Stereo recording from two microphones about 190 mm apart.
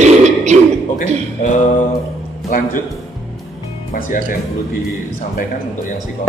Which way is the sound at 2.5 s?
45° left (ahead or behind).